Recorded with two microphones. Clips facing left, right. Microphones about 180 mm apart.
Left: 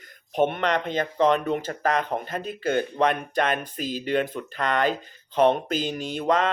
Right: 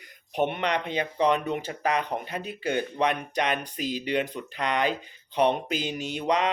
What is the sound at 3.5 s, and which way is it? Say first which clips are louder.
Speech: left 1 dB; 45° left (ahead or behind).